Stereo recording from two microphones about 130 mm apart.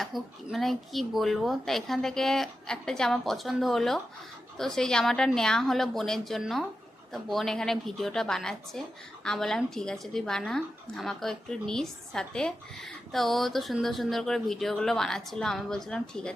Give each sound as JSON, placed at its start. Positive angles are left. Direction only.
{"t": 0.0, "sound": "a woman's voice", "side_deg": 0}